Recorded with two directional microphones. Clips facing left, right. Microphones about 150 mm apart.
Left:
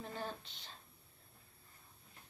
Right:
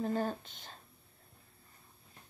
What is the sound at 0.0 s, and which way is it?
Speech, 45° right (ahead or behind).